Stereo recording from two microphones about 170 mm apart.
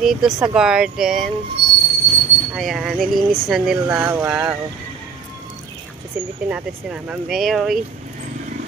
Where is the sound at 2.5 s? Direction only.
5° right (ahead or behind).